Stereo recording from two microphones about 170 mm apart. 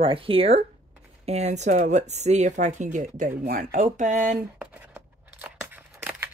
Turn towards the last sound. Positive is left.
turn(degrees=-10)  # may be behind; listen again after turning